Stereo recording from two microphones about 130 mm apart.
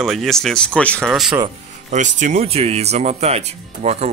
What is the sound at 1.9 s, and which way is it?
Speech, 70° right (ahead or behind).